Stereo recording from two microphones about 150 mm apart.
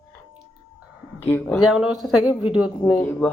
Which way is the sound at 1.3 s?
10° left (ahead or behind).